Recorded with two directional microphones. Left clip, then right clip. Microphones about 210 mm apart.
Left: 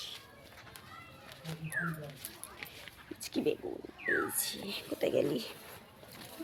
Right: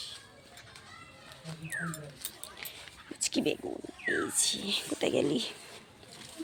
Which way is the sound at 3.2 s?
40° right (ahead or behind).